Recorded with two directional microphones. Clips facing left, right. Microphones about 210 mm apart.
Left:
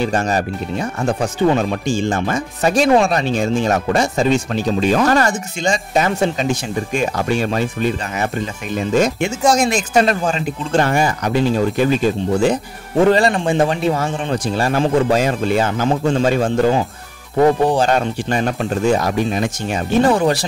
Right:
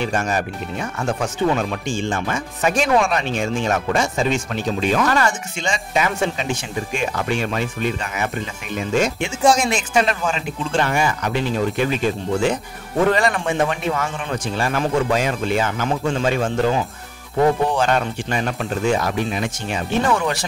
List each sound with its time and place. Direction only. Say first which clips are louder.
0.0 s speech: left 4 dB; 35° left (ahead or behind)